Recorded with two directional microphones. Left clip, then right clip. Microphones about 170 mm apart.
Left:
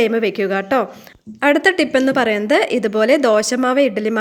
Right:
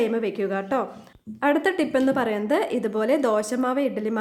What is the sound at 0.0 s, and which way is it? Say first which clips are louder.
A woman's voice: left 8 dB; 20° left (ahead or behind).